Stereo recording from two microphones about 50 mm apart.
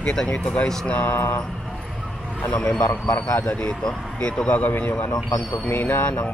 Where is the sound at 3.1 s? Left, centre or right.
Left.